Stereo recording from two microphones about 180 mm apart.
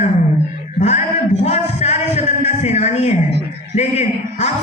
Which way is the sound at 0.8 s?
40° left (ahead or behind).